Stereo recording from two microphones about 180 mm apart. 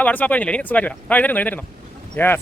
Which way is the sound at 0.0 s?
10° left (ahead or behind).